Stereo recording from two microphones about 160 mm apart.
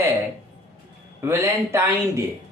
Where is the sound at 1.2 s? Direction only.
15° right (ahead or behind).